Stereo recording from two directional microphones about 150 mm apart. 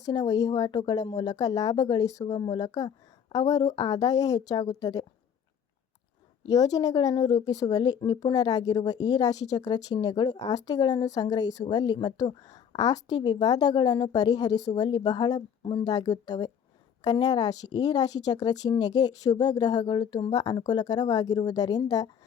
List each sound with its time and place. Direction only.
0.0 s speech: 25° left (ahead or behind)
6.5 s speech: 25° left (ahead or behind)